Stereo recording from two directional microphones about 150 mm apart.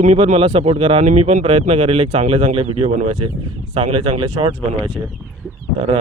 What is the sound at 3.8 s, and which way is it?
Speech, 35° right (ahead or behind).